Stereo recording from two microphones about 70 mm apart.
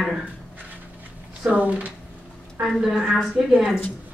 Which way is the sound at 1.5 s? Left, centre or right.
Centre.